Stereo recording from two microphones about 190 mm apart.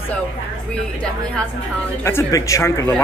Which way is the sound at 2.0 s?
15° left (ahead or behind).